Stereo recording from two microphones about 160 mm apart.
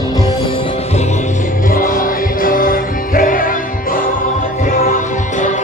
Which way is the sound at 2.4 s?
60° left (ahead or behind).